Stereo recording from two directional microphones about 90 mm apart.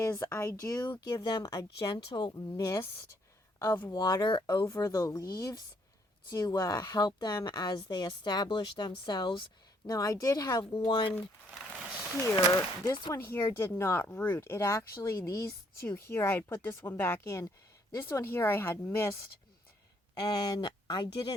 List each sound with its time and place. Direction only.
0.2 s speech: 30° left (ahead or behind)
0.9 s a woman's voice: 50° left (ahead or behind)
2.6 s speech: 40° left (ahead or behind)
3.6 s speech: 25° left (ahead or behind)
3.8 s a woman's voice: 45° left (ahead or behind)
4.8 s a woman's voice: 40° left (ahead or behind); by 9.4 s 65° left (ahead or behind)
9.8 s a woman's voice: 45° left (ahead or behind)
10.8 s a woman's voice: 65° left (ahead or behind)
12.2 s speech: 35° left (ahead or behind)
12.8 s a woman's voice: 50° left (ahead or behind)
13.1 s speech: 25° left (ahead or behind)
16.0 s speech: 25° left (ahead or behind)
20.4 s speech: 50° left (ahead or behind)